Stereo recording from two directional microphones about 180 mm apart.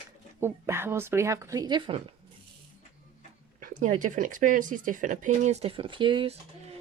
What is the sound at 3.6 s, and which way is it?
Speech, 45° right (ahead or behind).